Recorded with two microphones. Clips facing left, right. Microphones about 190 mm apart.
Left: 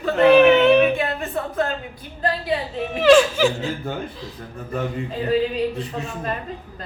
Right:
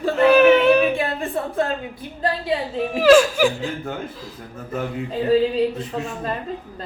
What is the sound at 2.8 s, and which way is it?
Speech, centre (ahead or behind).